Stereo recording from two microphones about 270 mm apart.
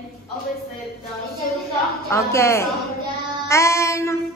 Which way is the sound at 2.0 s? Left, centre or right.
Centre.